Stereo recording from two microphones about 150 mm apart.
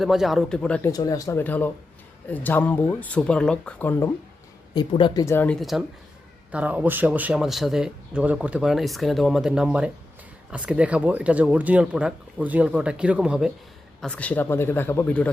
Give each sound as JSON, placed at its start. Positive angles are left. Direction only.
{"t": 0.0, "sound": "speech", "side_deg": 0}
{"t": 0.9, "sound": "speech", "side_deg": 25}
{"t": 4.7, "sound": "speech", "side_deg": 30}
{"t": 5.2, "sound": "speech", "side_deg": 15}
{"t": 5.5, "sound": "speech", "side_deg": 0}
{"t": 14.0, "sound": "speech", "side_deg": 10}